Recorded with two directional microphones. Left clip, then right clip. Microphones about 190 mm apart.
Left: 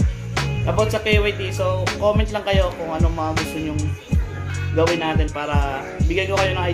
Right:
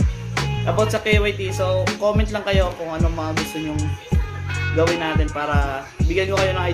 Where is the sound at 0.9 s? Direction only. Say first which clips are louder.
Even; 15° right (ahead or behind).